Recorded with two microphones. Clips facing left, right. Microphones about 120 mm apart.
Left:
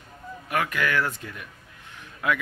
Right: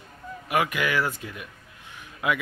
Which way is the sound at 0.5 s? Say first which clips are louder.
Right 1 dB; 10° right (ahead or behind).